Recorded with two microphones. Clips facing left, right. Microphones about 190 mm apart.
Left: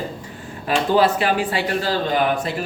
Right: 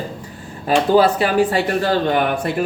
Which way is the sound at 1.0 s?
40° right (ahead or behind).